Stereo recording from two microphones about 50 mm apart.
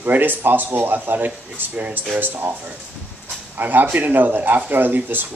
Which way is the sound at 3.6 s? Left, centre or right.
Right.